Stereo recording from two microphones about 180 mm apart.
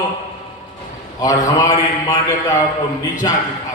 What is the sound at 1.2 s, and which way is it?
A man's voice, 20° left (ahead or behind).